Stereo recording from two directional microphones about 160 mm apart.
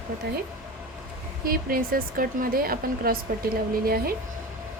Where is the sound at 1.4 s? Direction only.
65° right (ahead or behind).